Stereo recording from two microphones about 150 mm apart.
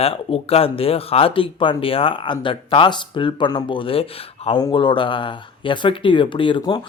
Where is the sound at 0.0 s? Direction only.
40° left (ahead or behind).